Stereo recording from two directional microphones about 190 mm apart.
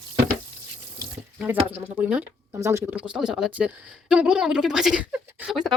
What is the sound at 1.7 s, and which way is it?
A woman's voice, 10° right (ahead or behind).